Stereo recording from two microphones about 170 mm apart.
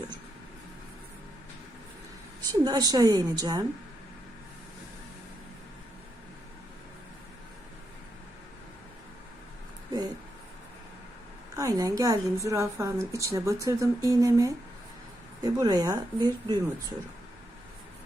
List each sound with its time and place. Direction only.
2.5 s a woman's voice: 20° right (ahead or behind)
11.5 s a woman's voice: 20° right (ahead or behind)